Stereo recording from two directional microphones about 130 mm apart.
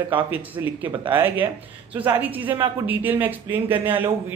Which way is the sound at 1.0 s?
15° right (ahead or behind).